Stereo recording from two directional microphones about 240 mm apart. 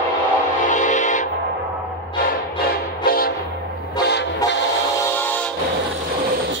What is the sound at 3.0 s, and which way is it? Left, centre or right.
Train horn, left.